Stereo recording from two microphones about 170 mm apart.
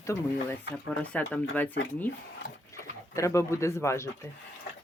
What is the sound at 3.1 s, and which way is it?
Speech, 15° left (ahead or behind).